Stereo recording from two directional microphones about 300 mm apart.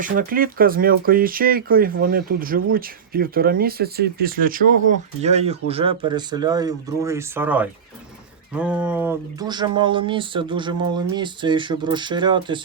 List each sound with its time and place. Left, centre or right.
0.0 s speech: right